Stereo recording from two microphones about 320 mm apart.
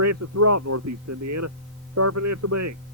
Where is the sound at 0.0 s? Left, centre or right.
Right.